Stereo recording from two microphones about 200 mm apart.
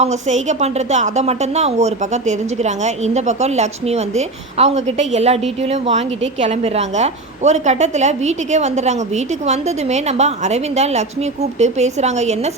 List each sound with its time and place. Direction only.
0.0 s a woman's voice: 35° right (ahead or behind)